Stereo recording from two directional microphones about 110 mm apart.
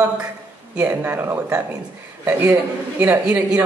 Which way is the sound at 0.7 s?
15° right (ahead or behind).